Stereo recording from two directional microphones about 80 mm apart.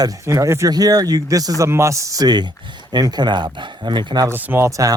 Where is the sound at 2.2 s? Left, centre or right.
Right.